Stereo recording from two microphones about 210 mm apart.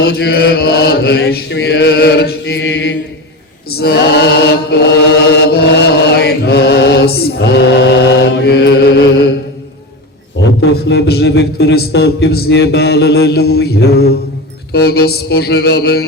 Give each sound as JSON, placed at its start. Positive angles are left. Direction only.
{"t": 0.0, "sound": "a man's voice", "side_deg": 50}
{"t": 3.7, "sound": "chant", "side_deg": 50}
{"t": 10.6, "sound": "a man's voice", "side_deg": 55}